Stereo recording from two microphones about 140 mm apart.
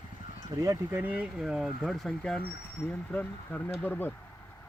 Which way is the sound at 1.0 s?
10° right (ahead or behind).